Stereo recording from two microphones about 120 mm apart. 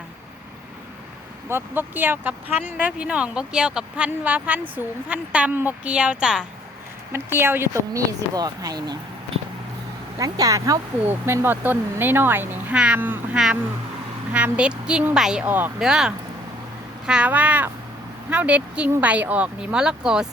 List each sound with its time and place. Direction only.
1.5 s speech: 20° right (ahead or behind)
7.1 s speech: 20° right (ahead or behind)
10.2 s speech: 30° right (ahead or behind)
11.1 s speech: 15° right (ahead or behind)